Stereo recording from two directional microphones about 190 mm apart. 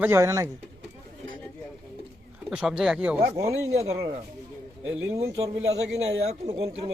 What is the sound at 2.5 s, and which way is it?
Speech, 5° right (ahead or behind).